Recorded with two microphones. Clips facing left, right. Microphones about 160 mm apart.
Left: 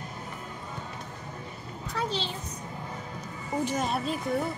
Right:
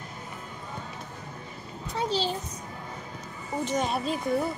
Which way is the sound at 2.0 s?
35° right (ahead or behind).